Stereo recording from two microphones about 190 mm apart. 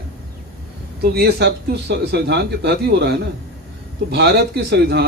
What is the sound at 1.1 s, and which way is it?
A man's voice, 60° right (ahead or behind).